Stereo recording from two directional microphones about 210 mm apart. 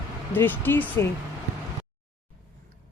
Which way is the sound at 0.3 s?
10° left (ahead or behind).